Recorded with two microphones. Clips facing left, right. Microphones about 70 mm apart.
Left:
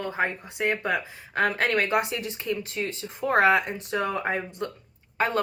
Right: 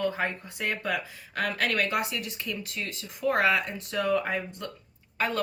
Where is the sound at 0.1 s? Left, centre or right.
Left.